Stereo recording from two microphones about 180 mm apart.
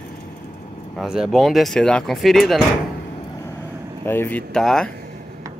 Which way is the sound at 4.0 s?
10° left (ahead or behind).